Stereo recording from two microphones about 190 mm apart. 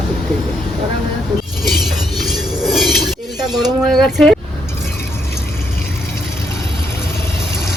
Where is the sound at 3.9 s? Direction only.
Centre (ahead or behind).